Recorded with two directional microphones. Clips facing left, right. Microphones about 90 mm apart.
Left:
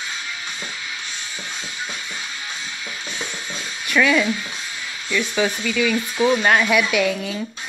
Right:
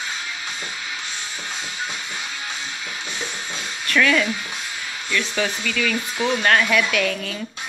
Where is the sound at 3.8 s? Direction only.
10° left (ahead or behind).